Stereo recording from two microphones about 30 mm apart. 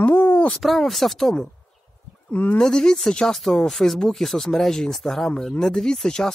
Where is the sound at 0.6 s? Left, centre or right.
Centre.